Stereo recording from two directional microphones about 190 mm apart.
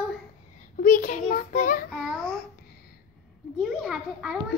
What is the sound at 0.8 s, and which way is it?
A child's voice, 45° left (ahead or behind).